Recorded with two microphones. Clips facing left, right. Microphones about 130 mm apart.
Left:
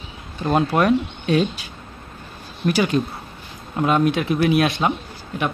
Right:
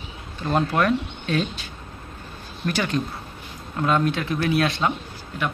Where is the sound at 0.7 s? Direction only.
15° left (ahead or behind).